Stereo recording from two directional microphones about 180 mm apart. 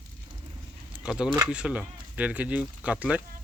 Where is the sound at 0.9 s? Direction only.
5° right (ahead or behind).